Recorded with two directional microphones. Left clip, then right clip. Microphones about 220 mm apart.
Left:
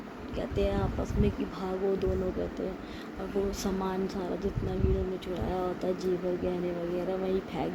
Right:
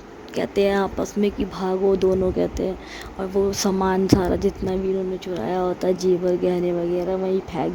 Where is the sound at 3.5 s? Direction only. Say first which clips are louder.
Right 11 dB; 40° right (ahead or behind).